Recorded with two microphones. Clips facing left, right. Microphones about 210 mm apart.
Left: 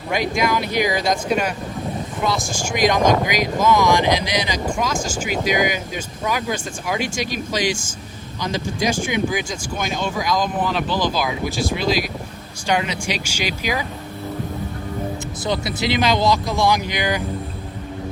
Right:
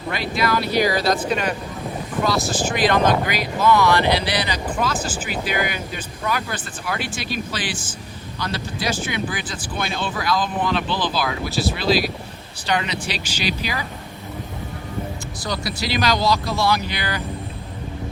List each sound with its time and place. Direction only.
0.1 s speech: 15° left (ahead or behind)
15.4 s speech: 20° left (ahead or behind)